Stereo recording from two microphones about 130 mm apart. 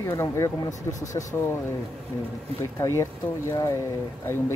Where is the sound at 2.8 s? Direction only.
20° left (ahead or behind).